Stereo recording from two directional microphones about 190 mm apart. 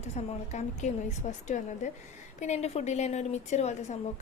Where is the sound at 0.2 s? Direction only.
35° left (ahead or behind).